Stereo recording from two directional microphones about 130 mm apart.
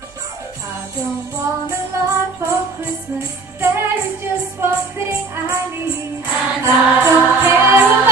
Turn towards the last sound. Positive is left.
turn(degrees=-15)  # may be behind; listen again after turning